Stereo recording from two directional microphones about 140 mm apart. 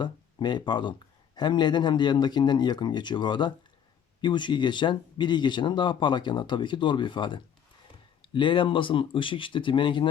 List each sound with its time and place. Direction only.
0.0 s speech: 30° left (ahead or behind)